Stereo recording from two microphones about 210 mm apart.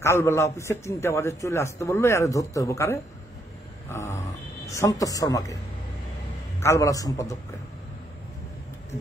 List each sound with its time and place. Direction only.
0.0 s a man's voice: 15° left (ahead or behind)
3.9 s a sound: 10° left (ahead or behind)
4.6 s a man's voice: 15° left (ahead or behind)
6.6 s a man's voice: 15° left (ahead or behind)